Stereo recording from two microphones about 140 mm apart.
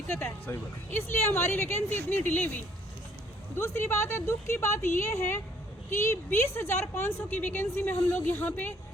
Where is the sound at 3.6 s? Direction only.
20° left (ahead or behind).